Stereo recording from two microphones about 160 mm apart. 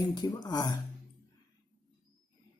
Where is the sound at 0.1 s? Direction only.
25° left (ahead or behind).